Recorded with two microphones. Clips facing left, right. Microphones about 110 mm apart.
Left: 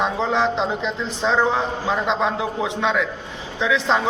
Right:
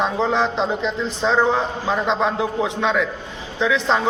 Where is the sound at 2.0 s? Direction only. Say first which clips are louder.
Right 1 dB; 15° left (ahead or behind).